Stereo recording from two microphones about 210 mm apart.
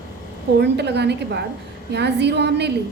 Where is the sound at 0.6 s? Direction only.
55° right (ahead or behind).